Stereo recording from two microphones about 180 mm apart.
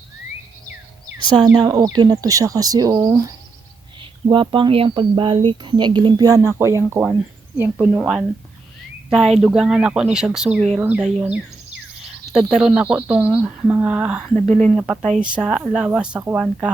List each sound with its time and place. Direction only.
1.2 s speech: 25° right (ahead or behind); by 16.7 s 5° right (ahead or behind)